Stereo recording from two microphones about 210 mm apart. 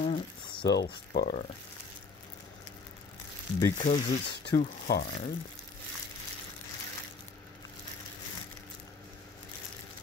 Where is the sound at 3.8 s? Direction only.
35° left (ahead or behind).